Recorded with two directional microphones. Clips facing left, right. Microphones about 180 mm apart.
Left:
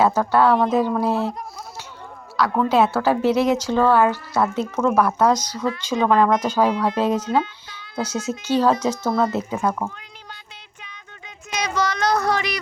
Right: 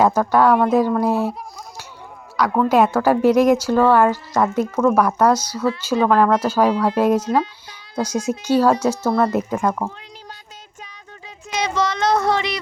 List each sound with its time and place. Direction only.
0.0 s speech: 15° right (ahead or behind)
9.5 s speech: 5° left (ahead or behind)
11.5 s child singing: 25° right (ahead or behind)